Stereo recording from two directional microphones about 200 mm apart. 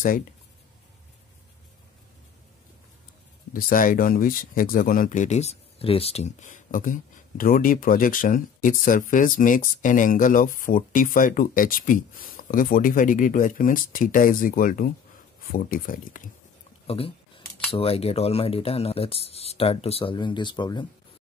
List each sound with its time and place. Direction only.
3.5 s speech: 45° left (ahead or behind)
16.8 s speech: 30° left (ahead or behind)